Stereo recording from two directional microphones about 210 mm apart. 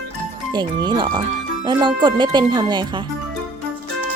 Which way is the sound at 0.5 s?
20° right (ahead or behind).